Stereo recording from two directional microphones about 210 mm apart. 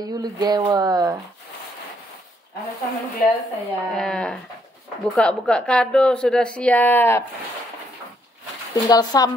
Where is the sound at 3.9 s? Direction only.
5° left (ahead or behind).